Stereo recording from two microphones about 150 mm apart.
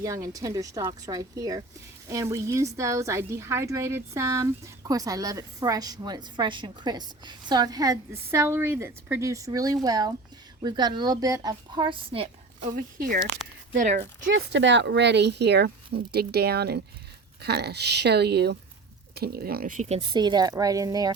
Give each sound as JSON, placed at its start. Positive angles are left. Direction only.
{"t": 0.0, "sound": "speech", "side_deg": -20}
{"t": 12.7, "sound": "speech", "side_deg": -75}
{"t": 13.7, "sound": "speech", "side_deg": -55}
{"t": 15.3, "sound": "speech", "side_deg": -90}
{"t": 20.0, "sound": "speech", "side_deg": -30}